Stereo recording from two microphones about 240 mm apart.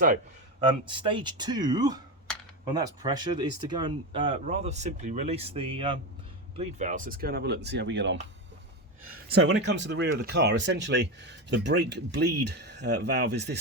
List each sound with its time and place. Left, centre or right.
0.9 s speech: centre; by 8.2 s right
9.3 s speech: right